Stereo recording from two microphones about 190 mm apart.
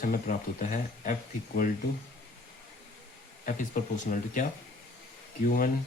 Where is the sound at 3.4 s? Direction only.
45° left (ahead or behind).